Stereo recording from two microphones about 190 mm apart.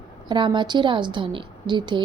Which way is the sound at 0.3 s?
25° right (ahead or behind).